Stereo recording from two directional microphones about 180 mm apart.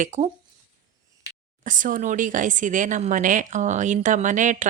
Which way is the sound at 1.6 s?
45° right (ahead or behind).